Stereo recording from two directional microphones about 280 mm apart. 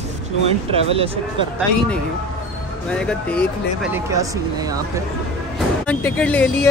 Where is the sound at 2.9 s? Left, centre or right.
Centre.